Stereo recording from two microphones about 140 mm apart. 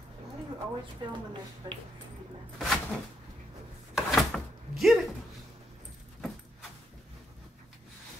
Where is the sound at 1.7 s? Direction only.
30° right (ahead or behind).